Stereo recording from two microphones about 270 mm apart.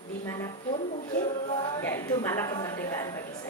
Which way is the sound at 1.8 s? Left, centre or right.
Centre.